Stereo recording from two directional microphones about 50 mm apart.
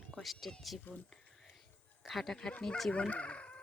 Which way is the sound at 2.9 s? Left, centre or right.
Left.